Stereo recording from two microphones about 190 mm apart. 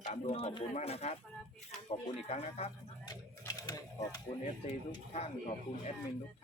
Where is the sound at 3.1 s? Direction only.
20° left (ahead or behind).